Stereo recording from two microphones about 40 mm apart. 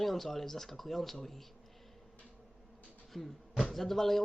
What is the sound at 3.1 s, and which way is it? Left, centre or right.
A man's voice, centre.